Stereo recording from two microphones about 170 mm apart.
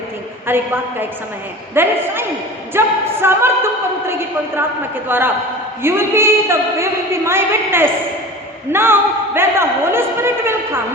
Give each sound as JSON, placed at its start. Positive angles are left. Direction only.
{"t": 0.4, "sound": "a woman's voice", "side_deg": -10}